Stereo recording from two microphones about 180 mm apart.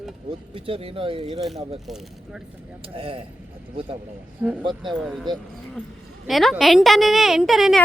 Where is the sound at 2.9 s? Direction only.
30° right (ahead or behind).